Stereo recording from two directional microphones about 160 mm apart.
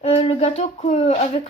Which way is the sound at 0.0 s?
40° left (ahead or behind).